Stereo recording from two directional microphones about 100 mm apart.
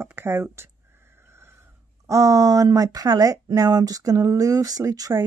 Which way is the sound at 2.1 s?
35° right (ahead or behind).